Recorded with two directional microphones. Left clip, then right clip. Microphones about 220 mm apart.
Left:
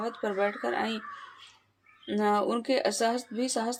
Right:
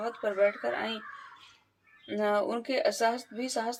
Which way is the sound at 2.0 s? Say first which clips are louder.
Left 2 dB; 50° left (ahead or behind).